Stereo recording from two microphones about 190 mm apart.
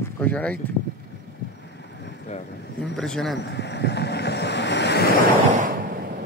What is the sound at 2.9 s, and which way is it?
Speech, 5° left (ahead or behind).